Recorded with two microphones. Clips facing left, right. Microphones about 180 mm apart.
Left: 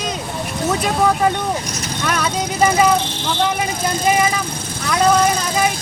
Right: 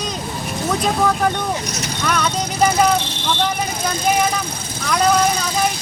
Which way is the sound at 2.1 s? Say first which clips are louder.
Even; 5° left (ahead or behind).